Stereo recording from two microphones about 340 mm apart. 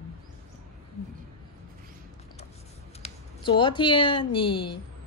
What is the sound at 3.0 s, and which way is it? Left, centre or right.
A woman's voice, centre.